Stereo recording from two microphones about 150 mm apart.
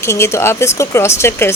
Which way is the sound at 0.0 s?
20° left (ahead or behind).